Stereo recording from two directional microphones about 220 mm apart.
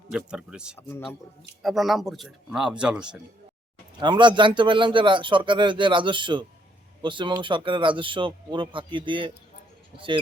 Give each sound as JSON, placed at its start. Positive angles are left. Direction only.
{"t": 0.1, "sound": "speech", "side_deg": -5}
{"t": 0.8, "sound": "a man's voice", "side_deg": 10}
{"t": 1.6, "sound": "speech", "side_deg": 0}
{"t": 4.0, "sound": "speech", "side_deg": -20}